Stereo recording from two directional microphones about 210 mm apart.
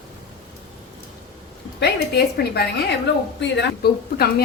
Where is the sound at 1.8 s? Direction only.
50° left (ahead or behind).